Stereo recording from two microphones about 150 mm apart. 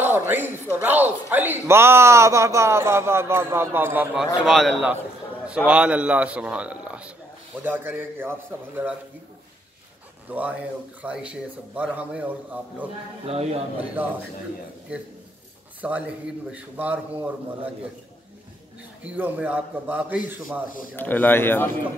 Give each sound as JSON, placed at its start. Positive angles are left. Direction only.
{"t": 0.0, "sound": "a man's voice", "side_deg": -15}
{"t": 4.2, "sound": "a man's voice", "side_deg": 0}
{"t": 10.3, "sound": "a man's voice", "side_deg": -10}
{"t": 13.3, "sound": "speech", "side_deg": -45}
{"t": 14.0, "sound": "a man's voice", "side_deg": -15}
{"t": 15.8, "sound": "a man's voice", "side_deg": -10}
{"t": 19.0, "sound": "a man's voice", "side_deg": -10}
{"t": 20.9, "sound": "speech", "side_deg": 10}